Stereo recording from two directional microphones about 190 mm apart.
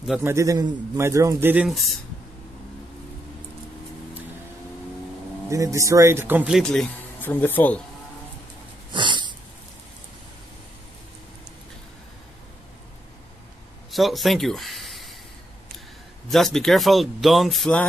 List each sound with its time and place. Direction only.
0.0 s a man's voice: centre (ahead or behind)
0.3 s a man's voice: 15° right (ahead or behind)
5.5 s speech: 15° right (ahead or behind); by 7.8 s 10° left (ahead or behind)
8.9 s dog: 25° right (ahead or behind)
13.9 s speech: centre (ahead or behind)
16.3 s speech: centre (ahead or behind)